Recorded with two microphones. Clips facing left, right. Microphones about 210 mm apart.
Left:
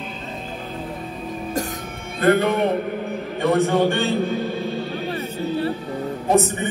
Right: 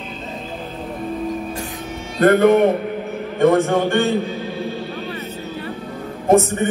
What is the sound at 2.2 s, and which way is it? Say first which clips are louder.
A man's voice: right 5 dB; 50° right (ahead or behind).